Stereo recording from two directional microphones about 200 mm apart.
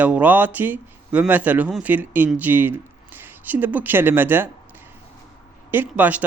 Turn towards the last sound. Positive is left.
turn(degrees=-5)  # may be behind; listen again after turning